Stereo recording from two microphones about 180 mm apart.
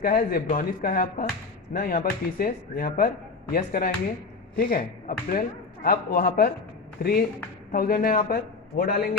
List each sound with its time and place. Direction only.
0.0 s a man's voice: 50° left (ahead or behind)